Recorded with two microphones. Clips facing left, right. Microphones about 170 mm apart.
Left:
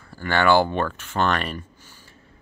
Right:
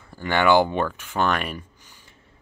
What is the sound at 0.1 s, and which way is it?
Speech, 15° right (ahead or behind).